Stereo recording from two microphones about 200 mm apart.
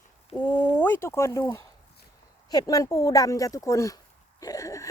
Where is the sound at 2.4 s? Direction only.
20° left (ahead or behind).